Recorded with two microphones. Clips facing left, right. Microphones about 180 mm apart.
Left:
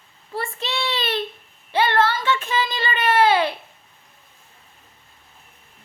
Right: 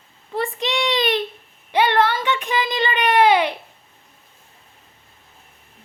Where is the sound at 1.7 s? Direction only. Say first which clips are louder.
Right 2 dB; 15° right (ahead or behind).